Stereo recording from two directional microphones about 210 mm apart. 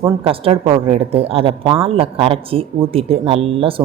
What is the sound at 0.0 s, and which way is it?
A man's voice, 25° right (ahead or behind).